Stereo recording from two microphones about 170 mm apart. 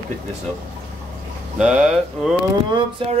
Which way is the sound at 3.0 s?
30° right (ahead or behind).